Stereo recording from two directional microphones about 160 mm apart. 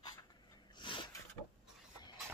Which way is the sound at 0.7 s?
30° left (ahead or behind).